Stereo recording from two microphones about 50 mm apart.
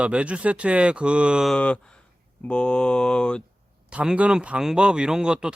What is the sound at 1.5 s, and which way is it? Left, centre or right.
Speech, left.